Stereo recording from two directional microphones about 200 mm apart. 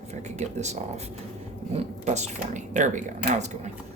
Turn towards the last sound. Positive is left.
turn(degrees=-35)  # may be behind; listen again after turning